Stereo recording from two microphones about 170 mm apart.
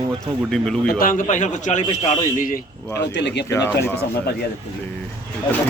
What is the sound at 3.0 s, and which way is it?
Speech, 90° left.